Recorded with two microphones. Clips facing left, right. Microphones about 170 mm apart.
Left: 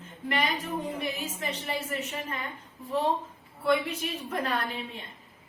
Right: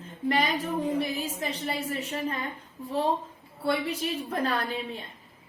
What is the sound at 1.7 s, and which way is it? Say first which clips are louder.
Speech: right 2 dB; 35° right (ahead or behind).